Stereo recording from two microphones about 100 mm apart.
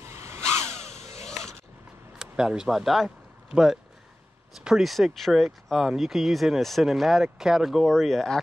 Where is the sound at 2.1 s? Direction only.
5° right (ahead or behind).